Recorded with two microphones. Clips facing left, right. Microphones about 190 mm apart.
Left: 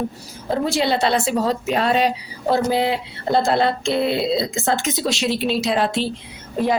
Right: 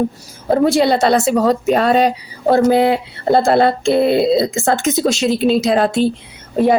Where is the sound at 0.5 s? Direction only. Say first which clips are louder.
Right 7 dB; 50° right (ahead or behind).